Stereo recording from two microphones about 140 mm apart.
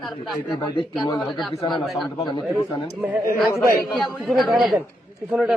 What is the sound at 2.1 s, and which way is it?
Speech, 30° left (ahead or behind).